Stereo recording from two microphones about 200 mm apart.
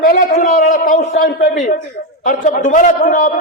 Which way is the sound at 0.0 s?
45° left (ahead or behind).